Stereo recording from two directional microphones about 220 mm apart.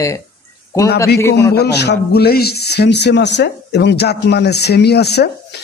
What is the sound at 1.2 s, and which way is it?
Speech, 15° left (ahead or behind).